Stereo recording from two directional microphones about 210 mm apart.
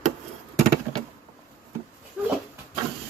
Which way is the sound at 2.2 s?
5° right (ahead or behind).